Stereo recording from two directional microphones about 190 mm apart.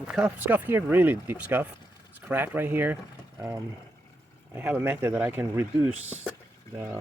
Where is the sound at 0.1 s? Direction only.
5° right (ahead or behind).